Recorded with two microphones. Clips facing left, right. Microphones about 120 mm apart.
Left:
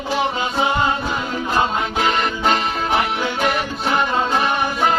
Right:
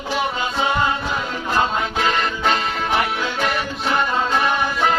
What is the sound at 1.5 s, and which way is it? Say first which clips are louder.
Music: even; 20° left (ahead or behind).